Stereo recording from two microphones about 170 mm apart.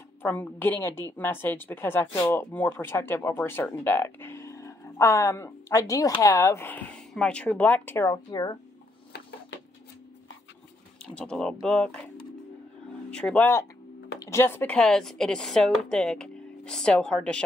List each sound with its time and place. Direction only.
0.2 s speech: 10° left (ahead or behind)
11.1 s speech: 5° left (ahead or behind)
13.1 s speech: 5° left (ahead or behind)